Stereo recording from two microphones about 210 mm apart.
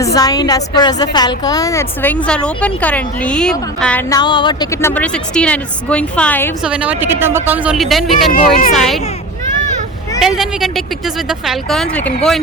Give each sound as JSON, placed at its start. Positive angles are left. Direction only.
{"t": 0.0, "sound": "a woman's voice", "side_deg": 15}
{"t": 4.1, "sound": "a woman's voice", "side_deg": 20}
{"t": 6.6, "sound": "speech", "side_deg": -5}
{"t": 8.3, "sound": "speech", "side_deg": 40}
{"t": 8.7, "sound": "speech", "side_deg": 0}
{"t": 10.2, "sound": "speech", "side_deg": 0}